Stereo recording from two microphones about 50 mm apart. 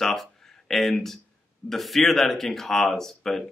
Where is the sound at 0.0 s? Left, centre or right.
Centre.